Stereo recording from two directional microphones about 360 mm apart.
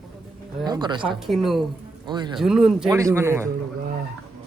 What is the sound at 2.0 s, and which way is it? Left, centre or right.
Speech, centre.